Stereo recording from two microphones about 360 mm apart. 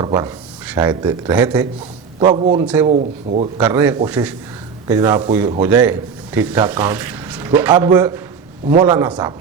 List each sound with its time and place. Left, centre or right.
0.0 s a man's voice: centre
2.9 s speech: centre
3.6 s a man's voice: centre